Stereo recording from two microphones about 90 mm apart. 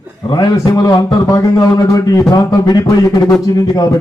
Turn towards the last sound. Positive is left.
turn(degrees=40)  # may be behind; listen again after turning